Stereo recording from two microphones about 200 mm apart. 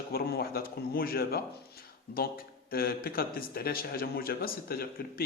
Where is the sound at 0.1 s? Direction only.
50° left (ahead or behind).